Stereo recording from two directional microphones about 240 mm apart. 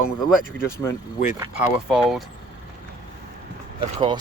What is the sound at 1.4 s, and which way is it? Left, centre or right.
Speech, centre.